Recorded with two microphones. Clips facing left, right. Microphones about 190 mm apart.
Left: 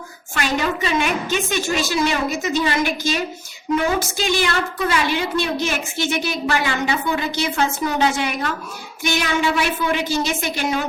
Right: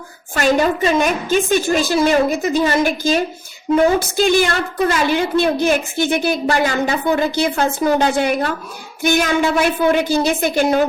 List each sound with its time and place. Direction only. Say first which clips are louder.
0.3 s a woman's voice: right 6 dB; 45° right (ahead or behind)